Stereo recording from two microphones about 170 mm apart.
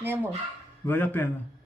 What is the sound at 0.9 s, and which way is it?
Speech, 10° left (ahead or behind).